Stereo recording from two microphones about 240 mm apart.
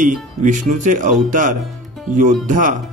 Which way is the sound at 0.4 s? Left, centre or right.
Right.